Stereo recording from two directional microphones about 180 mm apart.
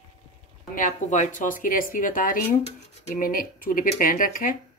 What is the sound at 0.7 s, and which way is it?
Speech, 45° left (ahead or behind).